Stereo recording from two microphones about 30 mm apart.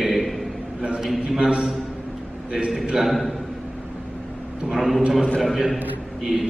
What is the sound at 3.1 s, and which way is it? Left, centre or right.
Speech, centre.